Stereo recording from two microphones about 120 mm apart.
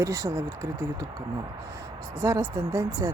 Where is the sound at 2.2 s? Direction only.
25° right (ahead or behind).